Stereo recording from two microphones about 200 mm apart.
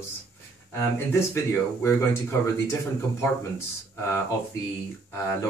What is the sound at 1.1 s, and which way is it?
Speech, 15° left (ahead or behind).